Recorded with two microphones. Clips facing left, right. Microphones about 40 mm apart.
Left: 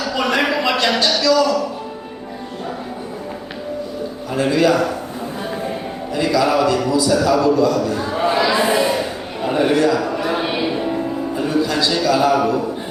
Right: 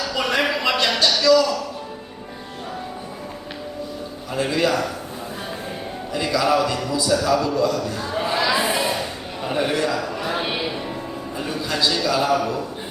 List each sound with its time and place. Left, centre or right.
0.0 s a sound: centre
4.4 s a man's voice: centre
6.4 s a man's voice: centre
8.1 s a sound: centre
9.5 s a man's voice: centre
9.8 s music: centre
11.3 s music: centre
11.7 s a man's voice: centre